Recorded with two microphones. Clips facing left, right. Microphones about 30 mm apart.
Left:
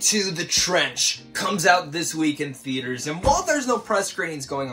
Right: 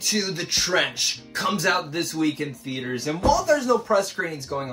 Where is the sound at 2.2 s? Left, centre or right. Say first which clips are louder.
Left 1 dB; left.